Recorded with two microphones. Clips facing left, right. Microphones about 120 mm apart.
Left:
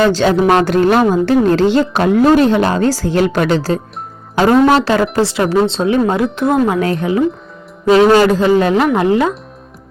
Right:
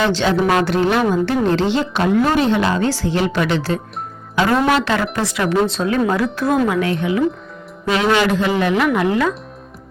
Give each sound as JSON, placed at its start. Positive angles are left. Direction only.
{"t": 0.0, "sound": "speech", "side_deg": 45}
{"t": 6.7, "sound": "speech", "side_deg": 35}